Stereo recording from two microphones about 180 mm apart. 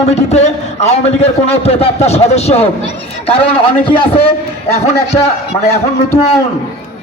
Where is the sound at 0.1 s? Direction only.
35° left (ahead or behind).